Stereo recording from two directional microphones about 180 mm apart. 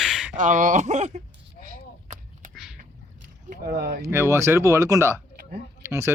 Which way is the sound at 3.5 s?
60° right (ahead or behind).